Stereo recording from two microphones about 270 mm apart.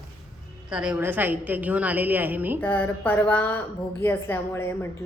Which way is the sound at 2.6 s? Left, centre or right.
Centre.